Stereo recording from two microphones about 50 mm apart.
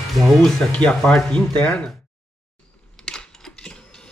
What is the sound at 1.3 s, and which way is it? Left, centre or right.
Speech, left.